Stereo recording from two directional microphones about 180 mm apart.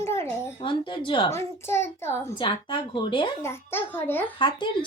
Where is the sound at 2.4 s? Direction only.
25° left (ahead or behind).